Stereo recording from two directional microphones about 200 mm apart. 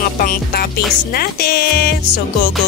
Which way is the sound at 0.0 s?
45° left (ahead or behind).